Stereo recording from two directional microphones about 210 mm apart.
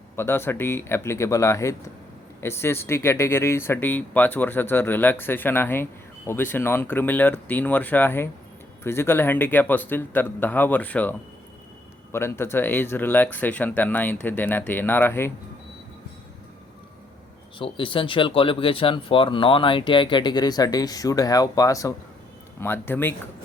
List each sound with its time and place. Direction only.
0.2 s speech: 10° left (ahead or behind)
12.1 s speech: 10° left (ahead or behind)
17.6 s speech: 25° left (ahead or behind)